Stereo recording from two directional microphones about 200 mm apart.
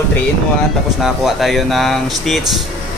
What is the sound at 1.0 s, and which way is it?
Mantra, centre (ahead or behind).